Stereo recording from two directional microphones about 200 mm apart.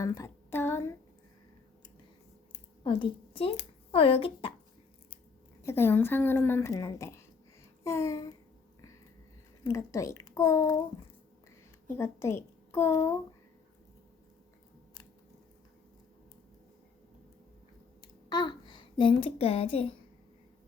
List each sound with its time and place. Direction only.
0.0 s a sound: 15° left (ahead or behind)
2.8 s speech: 25° left (ahead or behind)
5.6 s a woman's voice: 10° left (ahead or behind)
7.9 s a sound: 15° left (ahead or behind)
9.6 s a woman's voice: 15° left (ahead or behind)
11.9 s a child's voice: 10° left (ahead or behind)
18.0 s a child's voice: 20° left (ahead or behind)